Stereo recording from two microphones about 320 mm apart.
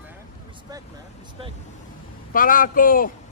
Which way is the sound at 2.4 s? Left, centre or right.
Left.